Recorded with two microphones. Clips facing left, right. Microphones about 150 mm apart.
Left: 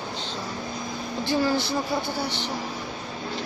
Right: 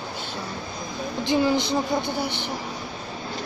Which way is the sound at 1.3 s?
20° right (ahead or behind).